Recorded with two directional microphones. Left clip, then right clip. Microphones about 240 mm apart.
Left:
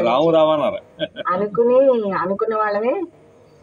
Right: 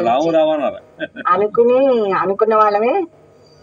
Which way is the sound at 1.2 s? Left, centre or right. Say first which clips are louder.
Right 5 dB; right.